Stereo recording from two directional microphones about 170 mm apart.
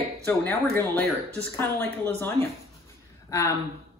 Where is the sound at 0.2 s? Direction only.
10° left (ahead or behind).